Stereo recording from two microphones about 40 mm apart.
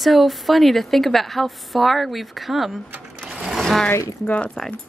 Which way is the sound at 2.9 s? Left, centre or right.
Right.